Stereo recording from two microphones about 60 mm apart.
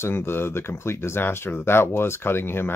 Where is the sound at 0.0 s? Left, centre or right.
Left.